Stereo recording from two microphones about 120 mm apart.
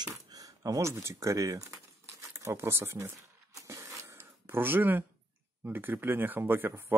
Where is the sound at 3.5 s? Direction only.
25° right (ahead or behind).